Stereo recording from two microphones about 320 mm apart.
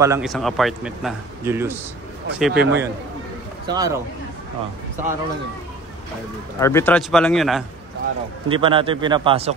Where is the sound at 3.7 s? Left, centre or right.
Centre.